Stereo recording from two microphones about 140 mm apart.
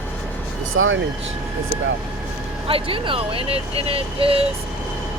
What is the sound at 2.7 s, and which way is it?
Speech, 40° right (ahead or behind).